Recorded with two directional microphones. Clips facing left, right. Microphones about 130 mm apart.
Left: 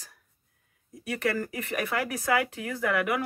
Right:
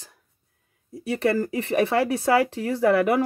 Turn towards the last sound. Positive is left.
turn(degrees=-35)  # may be behind; listen again after turning